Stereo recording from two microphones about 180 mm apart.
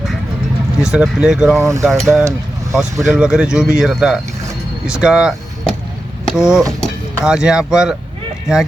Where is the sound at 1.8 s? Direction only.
Centre (ahead or behind).